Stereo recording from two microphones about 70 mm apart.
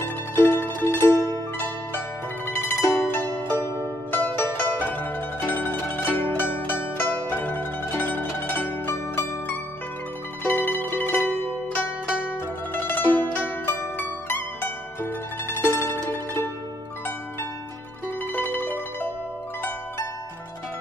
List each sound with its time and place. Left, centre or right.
0.0 s music: left
2.4 s zither: left
3.1 s music: left
3.4 s pizzicato: left
10.4 s zither: left
12.7 s music: left
18.3 s zither: left